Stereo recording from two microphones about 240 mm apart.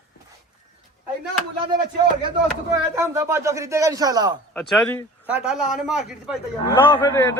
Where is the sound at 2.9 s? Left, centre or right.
Centre.